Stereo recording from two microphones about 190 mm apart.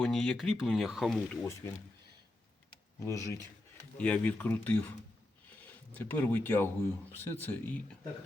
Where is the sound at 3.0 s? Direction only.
15° left (ahead or behind).